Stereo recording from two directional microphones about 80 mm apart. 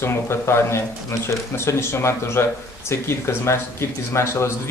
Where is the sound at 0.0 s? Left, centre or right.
Left.